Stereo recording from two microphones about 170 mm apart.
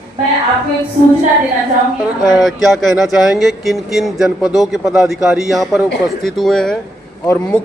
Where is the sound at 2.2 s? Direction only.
Centre (ahead or behind).